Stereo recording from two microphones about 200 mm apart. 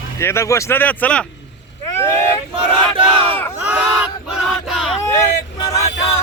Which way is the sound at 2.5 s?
25° right (ahead or behind).